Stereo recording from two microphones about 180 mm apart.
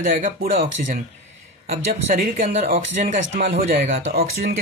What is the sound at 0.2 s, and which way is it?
Speech, 50° right (ahead or behind).